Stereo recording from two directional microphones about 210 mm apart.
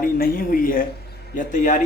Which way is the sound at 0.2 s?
45° left (ahead or behind).